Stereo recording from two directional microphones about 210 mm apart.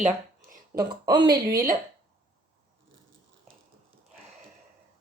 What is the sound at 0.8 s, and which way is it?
Speech, 20° right (ahead or behind).